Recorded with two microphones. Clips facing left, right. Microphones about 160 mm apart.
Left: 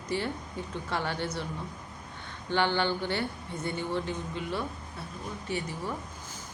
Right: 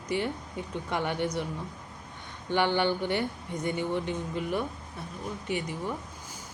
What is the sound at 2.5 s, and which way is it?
Speech, 15° right (ahead or behind).